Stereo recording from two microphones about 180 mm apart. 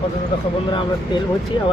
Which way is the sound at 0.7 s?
25° left (ahead or behind).